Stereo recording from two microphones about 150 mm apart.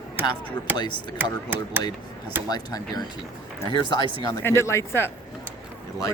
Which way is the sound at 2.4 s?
25° left (ahead or behind).